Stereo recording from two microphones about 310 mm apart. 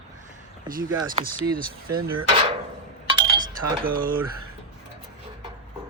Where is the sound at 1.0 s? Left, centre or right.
Right.